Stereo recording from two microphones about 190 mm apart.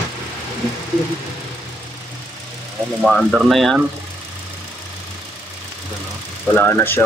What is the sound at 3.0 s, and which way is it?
Speech, 5° right (ahead or behind).